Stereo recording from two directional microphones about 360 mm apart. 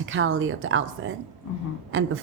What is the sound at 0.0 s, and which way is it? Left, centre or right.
Speech, right.